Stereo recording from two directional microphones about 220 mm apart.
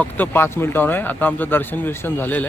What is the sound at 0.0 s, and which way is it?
Speech, 10° left (ahead or behind).